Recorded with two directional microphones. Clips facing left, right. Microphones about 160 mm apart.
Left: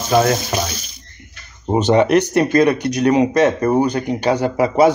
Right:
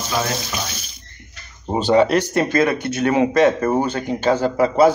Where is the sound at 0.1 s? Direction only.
50° left (ahead or behind).